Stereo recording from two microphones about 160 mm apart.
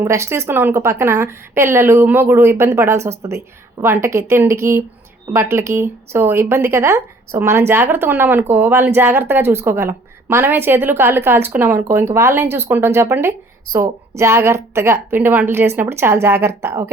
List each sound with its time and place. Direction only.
0.0 s speech: 15° right (ahead or behind)